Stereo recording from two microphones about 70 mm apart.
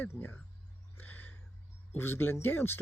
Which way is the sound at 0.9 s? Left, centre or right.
Left.